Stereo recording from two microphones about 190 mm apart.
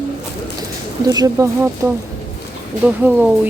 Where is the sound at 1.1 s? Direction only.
20° right (ahead or behind).